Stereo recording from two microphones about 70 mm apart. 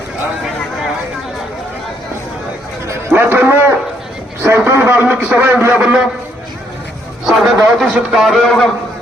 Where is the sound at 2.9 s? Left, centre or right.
Right.